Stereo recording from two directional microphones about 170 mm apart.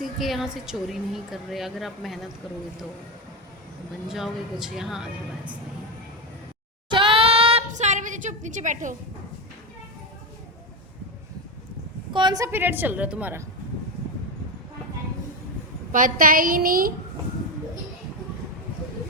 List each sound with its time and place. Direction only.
0.0 s a woman's voice: centre (ahead or behind)
4.1 s a woman's voice: 5° right (ahead or behind)
6.9 s a sound: 30° right (ahead or behind)
7.7 s a woman's voice: 45° right (ahead or behind)
12.1 s a woman's voice: 25° right (ahead or behind); by 13.4 s 10° right (ahead or behind)
15.9 s a woman's voice: 50° right (ahead or behind)